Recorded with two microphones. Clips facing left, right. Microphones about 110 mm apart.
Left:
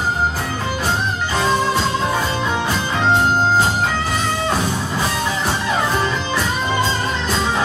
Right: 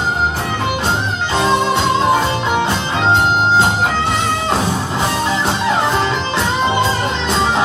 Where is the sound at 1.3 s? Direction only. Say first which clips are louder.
Right 3 dB; 25° right (ahead or behind).